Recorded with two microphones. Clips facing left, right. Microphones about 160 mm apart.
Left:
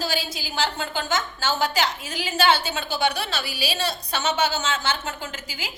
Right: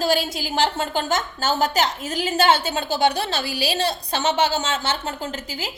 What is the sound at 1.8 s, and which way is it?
Speech, 45° right (ahead or behind).